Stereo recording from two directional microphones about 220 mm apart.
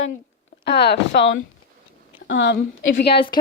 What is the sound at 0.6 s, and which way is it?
A woman's voice, 50° left (ahead or behind).